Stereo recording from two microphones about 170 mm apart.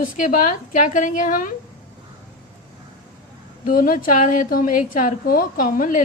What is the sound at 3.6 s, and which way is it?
A woman's voice, 55° left (ahead or behind).